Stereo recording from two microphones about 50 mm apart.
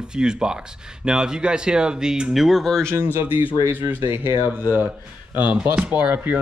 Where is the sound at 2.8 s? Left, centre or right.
Right.